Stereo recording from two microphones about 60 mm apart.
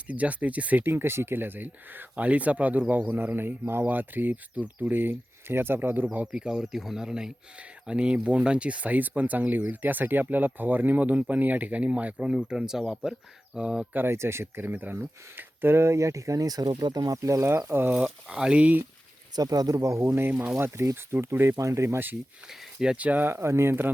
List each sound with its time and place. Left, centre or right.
0.1 s speech: right
0.9 s speech: right
6.3 s speech: centre
13.9 s speech: right
14.7 s speech: right
15.4 s speech: right
17.7 s speech: right
17.9 s speech: centre
19.4 s speech: right
21.6 s speech: right
21.8 s speech: right
22.4 s speech: centre
23.0 s speech: right
23.2 s speech: right